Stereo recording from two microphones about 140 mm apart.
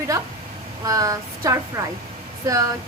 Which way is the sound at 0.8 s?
25° right (ahead or behind).